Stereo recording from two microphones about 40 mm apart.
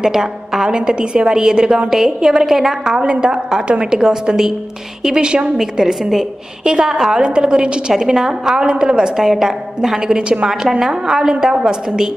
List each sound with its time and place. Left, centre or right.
0.0 s a woman's voice: centre
0.7 s a woman's voice: right; by 2.7 s centre
2.8 s a woman's voice: right
4.0 s a woman's voice: centre
5.1 s a woman's voice: right
7.9 s a woman's voice: centre